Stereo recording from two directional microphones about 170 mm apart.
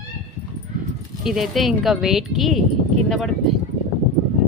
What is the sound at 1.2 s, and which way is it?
Speech, centre (ahead or behind).